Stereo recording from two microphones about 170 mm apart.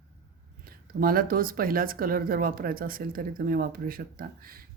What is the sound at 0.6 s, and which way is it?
Speech, 60° right (ahead or behind).